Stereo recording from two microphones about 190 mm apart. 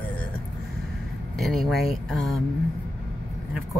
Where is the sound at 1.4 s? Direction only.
Centre (ahead or behind).